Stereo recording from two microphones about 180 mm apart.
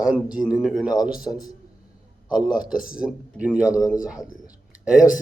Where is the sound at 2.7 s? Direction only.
5° right (ahead or behind).